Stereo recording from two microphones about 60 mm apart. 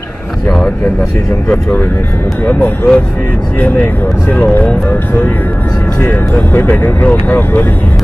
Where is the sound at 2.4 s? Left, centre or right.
Left.